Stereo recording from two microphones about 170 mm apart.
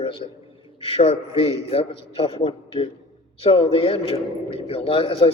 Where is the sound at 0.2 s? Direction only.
40° left (ahead or behind).